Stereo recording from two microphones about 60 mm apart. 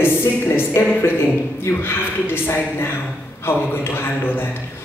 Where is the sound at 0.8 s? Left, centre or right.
Left.